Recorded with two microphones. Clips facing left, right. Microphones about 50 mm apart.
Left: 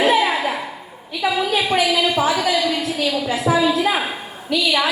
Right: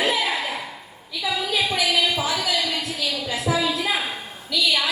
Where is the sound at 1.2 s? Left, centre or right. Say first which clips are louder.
Left 5 dB; left.